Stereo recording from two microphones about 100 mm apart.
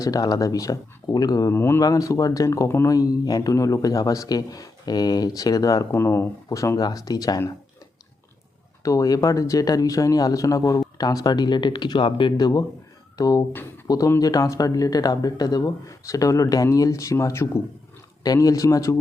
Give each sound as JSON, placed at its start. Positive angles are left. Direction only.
{"t": 0.0, "sound": "speech", "side_deg": 40}
{"t": 1.5, "sound": "speech", "side_deg": 25}
{"t": 5.9, "sound": "speech", "side_deg": 25}
{"t": 8.8, "sound": "speech", "side_deg": 35}
{"t": 13.5, "sound": "speech", "side_deg": 20}
{"t": 13.8, "sound": "speech", "side_deg": 40}